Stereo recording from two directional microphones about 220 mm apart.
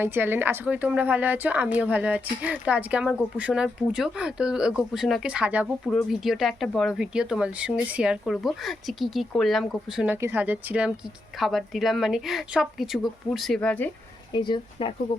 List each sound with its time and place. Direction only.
0.0 s a woman's voice: 10° right (ahead or behind); by 13.9 s 5° left (ahead or behind)
14.3 s speech: 20° left (ahead or behind)